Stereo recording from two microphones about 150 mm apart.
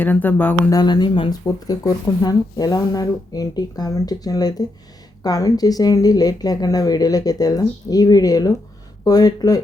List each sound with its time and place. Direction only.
0.0 s speech: 10° left (ahead or behind)
0.7 s speech: 25° left (ahead or behind)